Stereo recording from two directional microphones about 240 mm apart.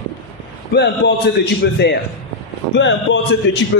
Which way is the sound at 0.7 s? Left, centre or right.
Left.